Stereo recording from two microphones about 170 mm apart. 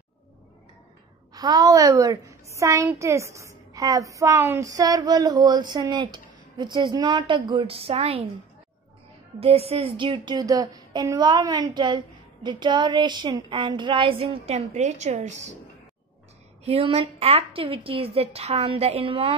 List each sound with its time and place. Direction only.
1.3 s a woman's voice: 25° right (ahead or behind)
9.4 s a woman's voice: 35° right (ahead or behind)
16.6 s speech: 35° right (ahead or behind)